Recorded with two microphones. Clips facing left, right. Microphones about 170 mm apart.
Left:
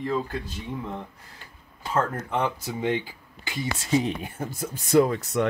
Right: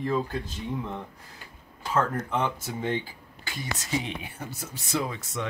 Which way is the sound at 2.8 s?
15° left (ahead or behind).